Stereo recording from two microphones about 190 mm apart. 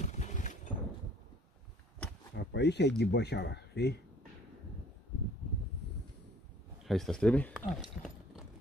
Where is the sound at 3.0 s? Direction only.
60° left (ahead or behind).